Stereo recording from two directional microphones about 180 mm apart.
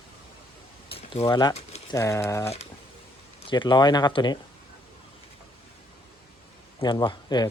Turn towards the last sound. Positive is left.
turn(degrees=25)  # may be behind; listen again after turning